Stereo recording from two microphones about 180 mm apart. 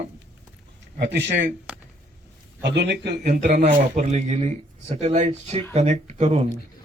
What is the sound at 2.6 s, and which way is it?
Speech, 70° right (ahead or behind).